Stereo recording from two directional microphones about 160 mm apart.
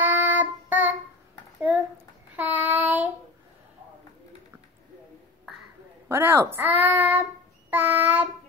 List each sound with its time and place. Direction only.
0.0 s child singing: 10° right (ahead or behind)
2.3 s child singing: 10° right (ahead or behind)
6.0 s a child's voice: 15° right (ahead or behind)
7.7 s child singing: 10° right (ahead or behind)